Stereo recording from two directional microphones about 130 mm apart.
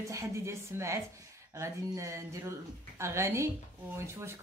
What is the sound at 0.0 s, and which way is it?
A woman's voice, 25° right (ahead or behind).